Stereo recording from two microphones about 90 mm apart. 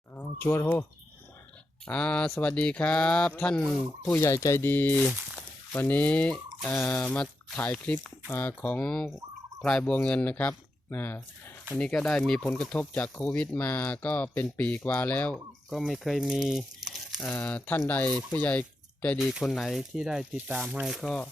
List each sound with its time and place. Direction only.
0.6 s speech: 25° left (ahead or behind)
1.8 s speech: 10° left (ahead or behind)
4.1 s speech: 30° left (ahead or behind); by 9.0 s 15° left (ahead or behind)
9.0 s fowl: 5° right (ahead or behind)
9.6 s speech: 10° left (ahead or behind)
11.8 s speech: 10° left (ahead or behind)
15.7 s speech: centre (ahead or behind)
17.2 s speech: 15° left (ahead or behind)
19.2 s speech: centre (ahead or behind)
20.3 s speech: 20° right (ahead or behind)
20.8 s speech: 5° right (ahead or behind)